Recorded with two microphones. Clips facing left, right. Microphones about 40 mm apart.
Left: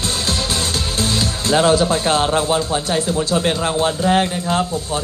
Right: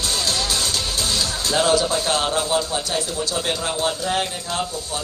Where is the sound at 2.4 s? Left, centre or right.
Left.